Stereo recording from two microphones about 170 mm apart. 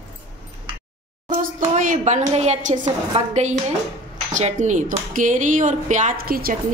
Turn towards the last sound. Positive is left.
turn(degrees=-60)  # may be behind; listen again after turning